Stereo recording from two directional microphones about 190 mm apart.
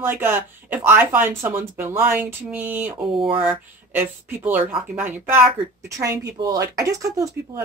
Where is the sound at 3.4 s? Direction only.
10° right (ahead or behind).